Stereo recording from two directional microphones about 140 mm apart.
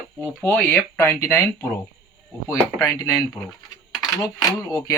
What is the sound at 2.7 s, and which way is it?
Speech, 20° left (ahead or behind).